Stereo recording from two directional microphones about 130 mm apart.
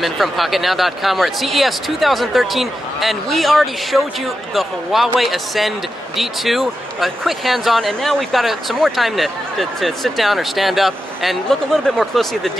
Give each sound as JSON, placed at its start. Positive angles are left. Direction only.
{"t": 0.0, "sound": "speech", "side_deg": 0}